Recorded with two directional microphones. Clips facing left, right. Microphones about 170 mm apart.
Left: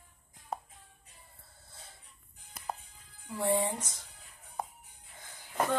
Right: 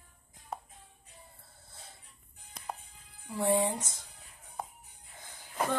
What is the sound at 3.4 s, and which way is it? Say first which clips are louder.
Speech: right 2 dB; 20° right (ahead or behind).